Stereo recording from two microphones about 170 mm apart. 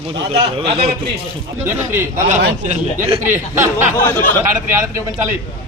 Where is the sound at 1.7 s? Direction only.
15° right (ahead or behind).